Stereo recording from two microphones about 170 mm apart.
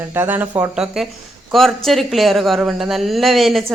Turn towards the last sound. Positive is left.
turn(degrees=0)  # may be behind; listen again after turning